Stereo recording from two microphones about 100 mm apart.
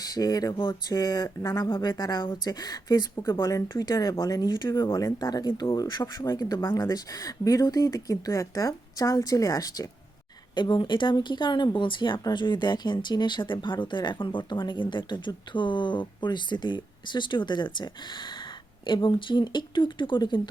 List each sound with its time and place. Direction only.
0.0 s speech: 40° left (ahead or behind)
10.5 s speech: 50° left (ahead or behind)